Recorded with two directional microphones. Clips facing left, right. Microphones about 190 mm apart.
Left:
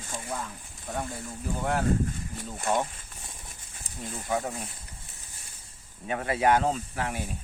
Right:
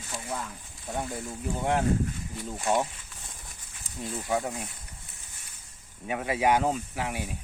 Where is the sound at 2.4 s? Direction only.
55° left (ahead or behind).